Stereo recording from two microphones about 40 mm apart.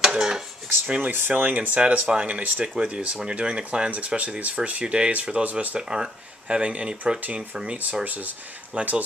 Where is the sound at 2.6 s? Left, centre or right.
Right.